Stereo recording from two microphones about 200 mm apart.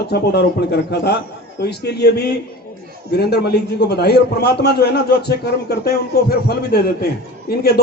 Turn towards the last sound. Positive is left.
turn(degrees=50)  # may be behind; listen again after turning